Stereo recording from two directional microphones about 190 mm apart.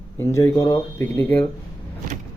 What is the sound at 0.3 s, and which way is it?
Speech, 15° left (ahead or behind).